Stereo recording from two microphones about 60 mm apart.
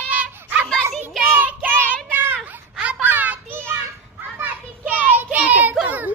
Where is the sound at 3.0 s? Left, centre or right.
Right.